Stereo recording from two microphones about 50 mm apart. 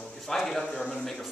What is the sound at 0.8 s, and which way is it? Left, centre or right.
Speech, left.